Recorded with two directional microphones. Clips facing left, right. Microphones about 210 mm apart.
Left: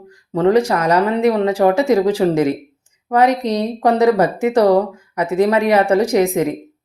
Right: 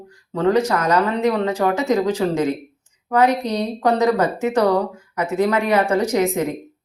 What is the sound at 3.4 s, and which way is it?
Speech, 30° left (ahead or behind).